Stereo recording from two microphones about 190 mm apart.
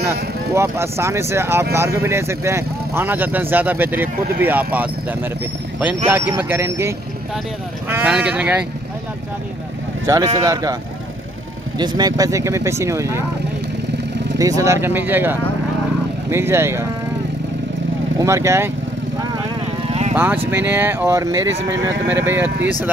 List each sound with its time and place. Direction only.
0.6 s speech: 15° right (ahead or behind)
6.3 s speech: 10° right (ahead or behind)
10.0 s speech: 15° right (ahead or behind)
11.8 s speech: 20° right (ahead or behind)
14.4 s speech: 15° right (ahead or behind)
18.2 s speech: 15° right (ahead or behind)
20.2 s speech: 10° right (ahead or behind)